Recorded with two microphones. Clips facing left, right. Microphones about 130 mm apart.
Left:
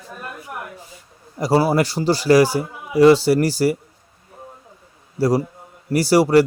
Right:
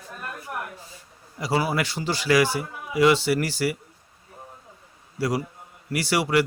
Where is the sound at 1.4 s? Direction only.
40° left (ahead or behind).